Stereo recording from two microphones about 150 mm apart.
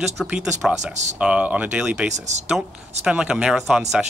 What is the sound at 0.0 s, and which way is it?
Speech, 5° right (ahead or behind).